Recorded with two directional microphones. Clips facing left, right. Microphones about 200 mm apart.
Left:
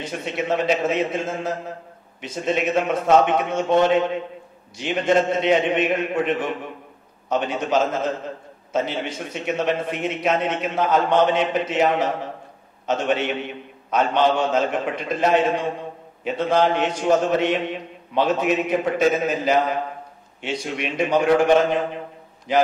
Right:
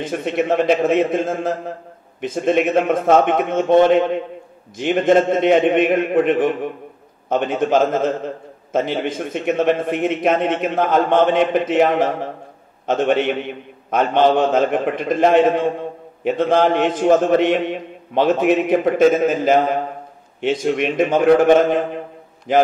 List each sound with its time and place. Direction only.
0.0 s a man's voice: 50° right (ahead or behind)